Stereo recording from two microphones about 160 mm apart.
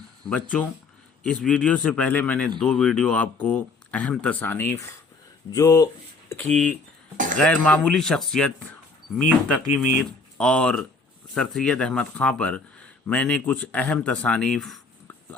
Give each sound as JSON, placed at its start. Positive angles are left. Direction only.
{"t": 0.3, "sound": "speech", "side_deg": 5}
{"t": 6.5, "sound": "speech", "side_deg": 5}